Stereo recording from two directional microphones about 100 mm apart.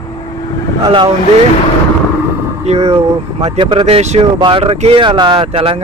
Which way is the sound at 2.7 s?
90° right.